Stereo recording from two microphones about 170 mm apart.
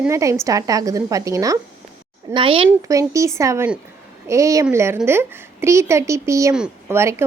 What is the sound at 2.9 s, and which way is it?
A woman's voice, 20° right (ahead or behind).